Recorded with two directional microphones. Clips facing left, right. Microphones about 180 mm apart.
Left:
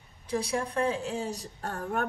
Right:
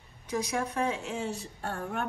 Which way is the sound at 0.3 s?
30° left (ahead or behind).